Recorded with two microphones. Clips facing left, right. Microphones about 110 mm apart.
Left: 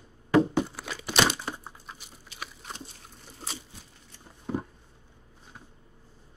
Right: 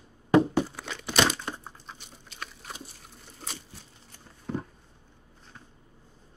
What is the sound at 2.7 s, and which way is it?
Crunch, centre (ahead or behind).